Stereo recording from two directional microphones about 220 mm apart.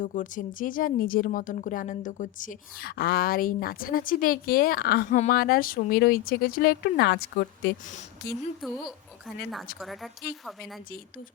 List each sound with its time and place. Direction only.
0.0 s speech: 35° left (ahead or behind)
7.9 s speech: 35° left (ahead or behind)
8.6 s a woman's voice: centre (ahead or behind)